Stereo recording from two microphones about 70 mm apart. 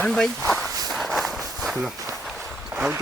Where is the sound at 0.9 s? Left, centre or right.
Centre.